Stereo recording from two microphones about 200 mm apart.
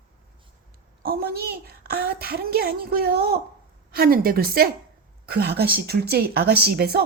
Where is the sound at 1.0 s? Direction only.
50° right (ahead or behind).